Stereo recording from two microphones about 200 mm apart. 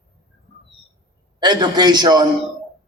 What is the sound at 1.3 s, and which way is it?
Speech, 20° right (ahead or behind).